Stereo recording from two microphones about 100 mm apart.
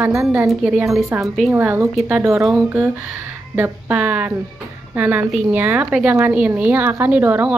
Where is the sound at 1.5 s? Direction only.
20° right (ahead or behind).